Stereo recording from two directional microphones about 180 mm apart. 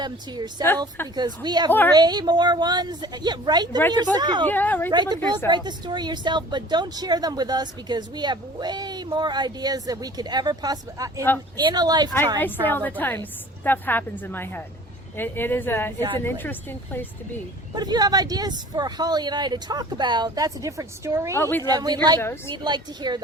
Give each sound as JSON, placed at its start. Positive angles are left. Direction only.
{"t": 0.0, "sound": "speech", "side_deg": -25}
{"t": 4.4, "sound": "speech", "side_deg": 10}
{"t": 4.9, "sound": "speech", "side_deg": -25}
{"t": 12.4, "sound": "speech", "side_deg": 10}
{"t": 16.0, "sound": "speech", "side_deg": -25}
{"t": 16.2, "sound": "speech", "side_deg": 10}
{"t": 17.7, "sound": "speech", "side_deg": -20}
{"t": 21.3, "sound": "speech", "side_deg": 15}
{"t": 21.6, "sound": "speech", "side_deg": -20}
{"t": 22.2, "sound": "speech", "side_deg": 15}
{"t": 22.5, "sound": "speech", "side_deg": -25}